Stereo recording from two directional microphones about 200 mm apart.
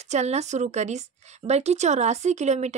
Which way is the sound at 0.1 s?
35° right (ahead or behind).